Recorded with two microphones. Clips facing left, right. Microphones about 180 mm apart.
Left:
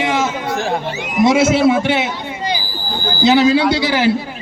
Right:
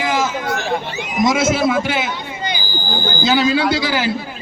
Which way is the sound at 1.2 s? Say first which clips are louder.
Left 4 dB; 30° left (ahead or behind).